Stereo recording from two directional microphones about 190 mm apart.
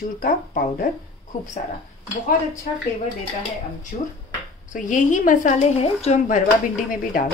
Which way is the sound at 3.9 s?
40° left (ahead or behind).